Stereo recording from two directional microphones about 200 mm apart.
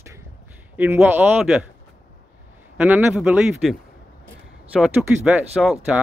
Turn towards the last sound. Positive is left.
turn(degrees=-5)  # may be behind; listen again after turning